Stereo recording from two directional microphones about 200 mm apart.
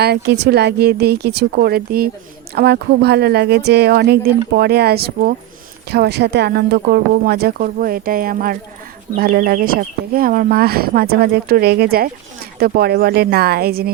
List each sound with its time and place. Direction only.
0.0 s speech: 55° right (ahead or behind)